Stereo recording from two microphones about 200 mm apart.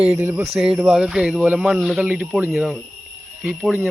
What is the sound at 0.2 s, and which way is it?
Speech, 10° right (ahead or behind).